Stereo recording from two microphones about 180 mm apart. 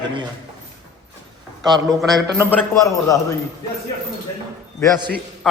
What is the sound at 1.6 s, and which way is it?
Speech, 20° right (ahead or behind).